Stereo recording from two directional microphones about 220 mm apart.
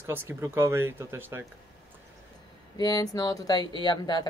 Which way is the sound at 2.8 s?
15° left (ahead or behind).